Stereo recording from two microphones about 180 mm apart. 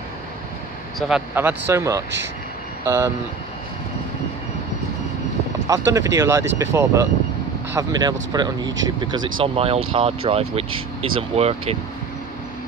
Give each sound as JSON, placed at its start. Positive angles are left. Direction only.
{"t": 0.9, "sound": "speech", "side_deg": -5}
{"t": 5.7, "sound": "speech", "side_deg": -15}